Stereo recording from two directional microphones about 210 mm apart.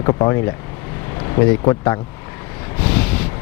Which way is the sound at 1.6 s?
15° left (ahead or behind).